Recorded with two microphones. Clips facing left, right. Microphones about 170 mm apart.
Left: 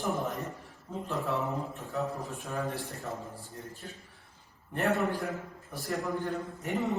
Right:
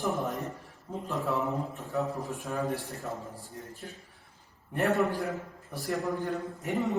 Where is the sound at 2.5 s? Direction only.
20° right (ahead or behind).